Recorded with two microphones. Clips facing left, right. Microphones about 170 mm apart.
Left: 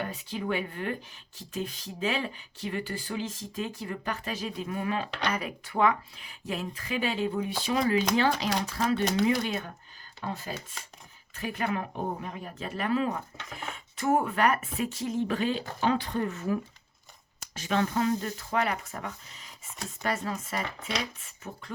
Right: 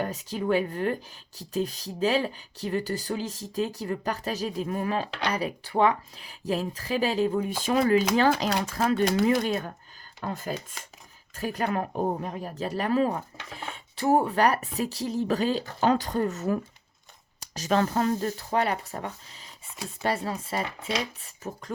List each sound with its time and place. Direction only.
0.0 s speech: 40° right (ahead or behind)
11.3 s speech: 40° right (ahead or behind)